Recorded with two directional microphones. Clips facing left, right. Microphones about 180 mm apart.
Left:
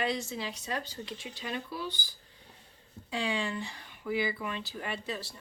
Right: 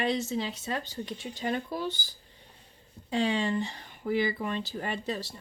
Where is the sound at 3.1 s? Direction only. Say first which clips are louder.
Right 6 dB; 40° right (ahead or behind).